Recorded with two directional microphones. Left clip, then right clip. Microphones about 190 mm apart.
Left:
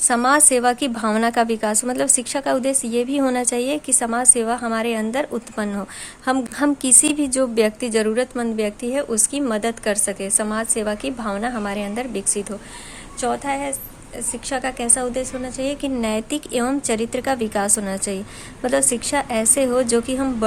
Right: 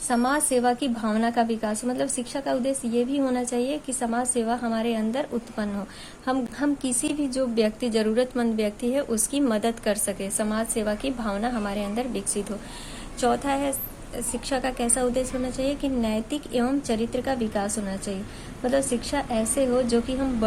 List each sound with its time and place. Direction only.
0.1 s a woman's voice: 40° left (ahead or behind)
13.1 s a woman's voice: 15° left (ahead or behind); by 20.3 s 35° left (ahead or behind)